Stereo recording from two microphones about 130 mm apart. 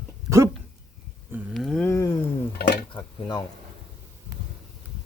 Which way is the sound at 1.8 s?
20° left (ahead or behind).